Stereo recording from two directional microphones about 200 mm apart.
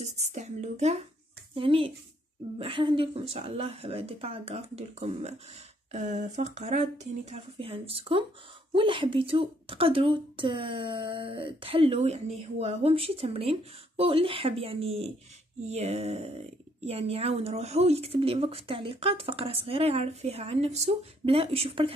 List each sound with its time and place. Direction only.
0.0 s a woman's voice: 35° right (ahead or behind)